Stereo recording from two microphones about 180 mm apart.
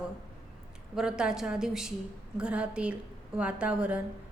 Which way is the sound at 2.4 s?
5° right (ahead or behind).